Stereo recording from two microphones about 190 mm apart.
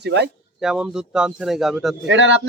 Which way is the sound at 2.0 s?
70° right (ahead or behind).